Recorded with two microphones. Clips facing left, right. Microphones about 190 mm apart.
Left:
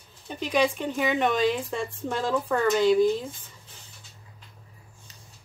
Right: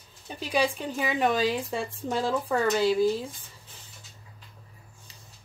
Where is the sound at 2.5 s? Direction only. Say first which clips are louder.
Left 3 dB; 10° right (ahead or behind).